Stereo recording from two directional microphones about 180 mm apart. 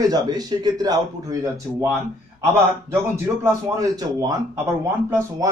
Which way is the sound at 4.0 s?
20° right (ahead or behind).